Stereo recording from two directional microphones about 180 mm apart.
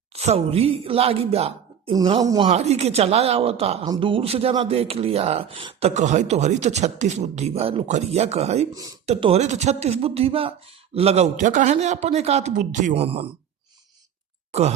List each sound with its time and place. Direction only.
0.1 s a man's voice: 35° right (ahead or behind)
2.5 s a man's voice: 35° right (ahead or behind)
5.9 s a man's voice: 40° right (ahead or behind)
8.7 s speech: 20° right (ahead or behind)
9.0 s a man's voice: 35° right (ahead or behind)
14.5 s speech: 35° right (ahead or behind)